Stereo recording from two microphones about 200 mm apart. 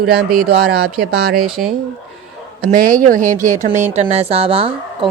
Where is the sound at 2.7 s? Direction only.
40° right (ahead or behind).